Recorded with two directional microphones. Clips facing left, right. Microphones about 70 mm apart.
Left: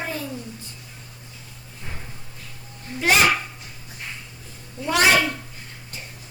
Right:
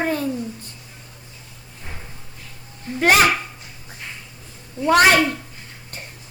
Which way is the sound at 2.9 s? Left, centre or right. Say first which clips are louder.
Right 4 dB; right.